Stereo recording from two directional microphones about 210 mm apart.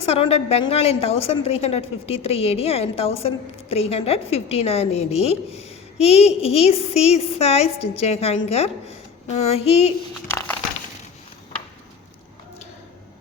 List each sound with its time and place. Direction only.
0.0 s a woman's voice: 30° left (ahead or behind)